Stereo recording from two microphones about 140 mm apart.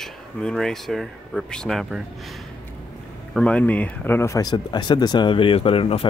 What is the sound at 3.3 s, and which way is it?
Speech, 10° left (ahead or behind).